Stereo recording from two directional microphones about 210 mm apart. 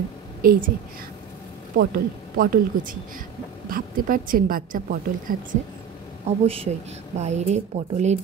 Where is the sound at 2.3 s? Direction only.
40° right (ahead or behind).